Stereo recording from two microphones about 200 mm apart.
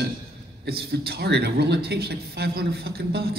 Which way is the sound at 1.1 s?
55° right (ahead or behind).